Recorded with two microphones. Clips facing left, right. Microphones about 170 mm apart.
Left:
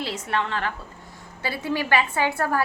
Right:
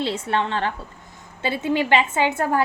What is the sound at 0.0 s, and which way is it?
A woman's voice, 30° right (ahead or behind).